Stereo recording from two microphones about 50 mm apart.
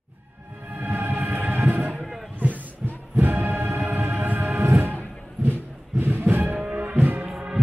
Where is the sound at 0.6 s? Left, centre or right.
Right.